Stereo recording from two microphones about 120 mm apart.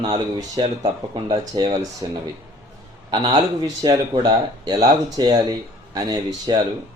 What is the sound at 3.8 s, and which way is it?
Speech, 35° right (ahead or behind).